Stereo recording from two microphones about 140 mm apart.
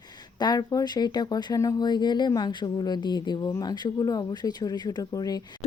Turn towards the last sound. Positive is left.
turn(degrees=25)  # may be behind; listen again after turning